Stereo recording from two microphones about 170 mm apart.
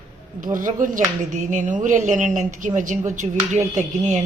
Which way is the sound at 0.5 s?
50° right (ahead or behind).